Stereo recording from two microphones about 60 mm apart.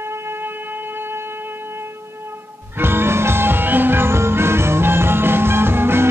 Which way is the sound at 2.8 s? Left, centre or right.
Right.